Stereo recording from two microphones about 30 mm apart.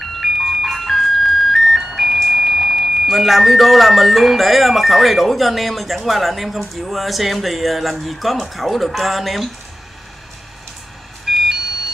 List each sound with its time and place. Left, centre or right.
0.0 s music: centre
1.8 s music: centre
2.2 s speech: centre
11.2 s smoke detector: centre